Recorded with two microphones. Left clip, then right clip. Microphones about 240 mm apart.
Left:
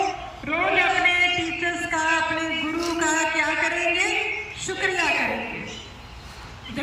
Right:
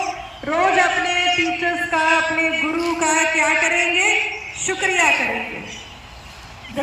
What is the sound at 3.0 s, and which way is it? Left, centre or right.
Music, right.